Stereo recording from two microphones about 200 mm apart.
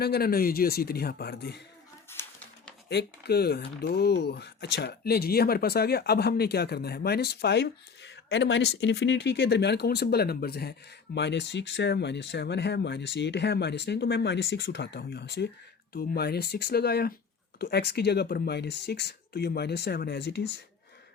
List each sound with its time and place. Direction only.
0.0 s speech: 50° left (ahead or behind)
2.2 s a sound: 15° left (ahead or behind)
2.9 s speech: 55° left (ahead or behind)